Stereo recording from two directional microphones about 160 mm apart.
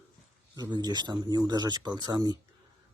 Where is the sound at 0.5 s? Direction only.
25° right (ahead or behind).